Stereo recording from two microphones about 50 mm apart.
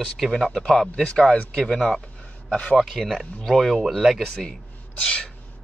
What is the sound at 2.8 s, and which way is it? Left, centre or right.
Speech, centre.